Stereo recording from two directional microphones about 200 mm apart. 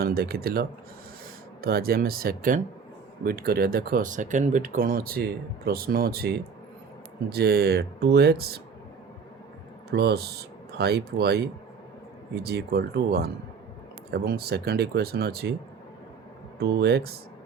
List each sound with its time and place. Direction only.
0.0 s speech: 50° right (ahead or behind)
9.9 s speech: 55° right (ahead or behind)
16.6 s speech: 55° right (ahead or behind)